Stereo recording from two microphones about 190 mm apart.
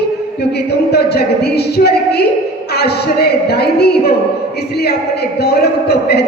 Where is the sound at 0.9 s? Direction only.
60° left (ahead or behind).